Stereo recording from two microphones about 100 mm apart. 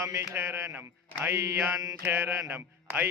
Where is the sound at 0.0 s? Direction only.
25° right (ahead or behind).